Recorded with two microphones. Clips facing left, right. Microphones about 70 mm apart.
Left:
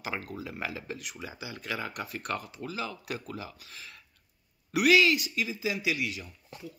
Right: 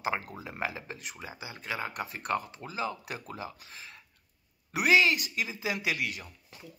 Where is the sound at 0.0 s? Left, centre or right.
Right.